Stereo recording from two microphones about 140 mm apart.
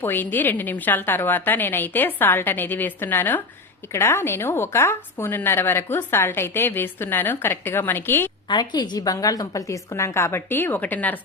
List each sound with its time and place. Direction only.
0.0 s speech: 15° left (ahead or behind)
8.4 s a woman's voice: 30° left (ahead or behind); by 11.2 s 10° left (ahead or behind)